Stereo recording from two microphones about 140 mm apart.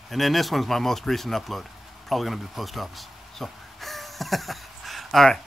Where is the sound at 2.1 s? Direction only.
Centre (ahead or behind).